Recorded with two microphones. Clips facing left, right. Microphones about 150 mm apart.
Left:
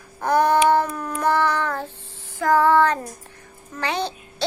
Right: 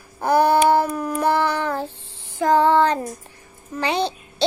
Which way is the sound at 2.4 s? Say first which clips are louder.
Right 1 dB; 20° right (ahead or behind).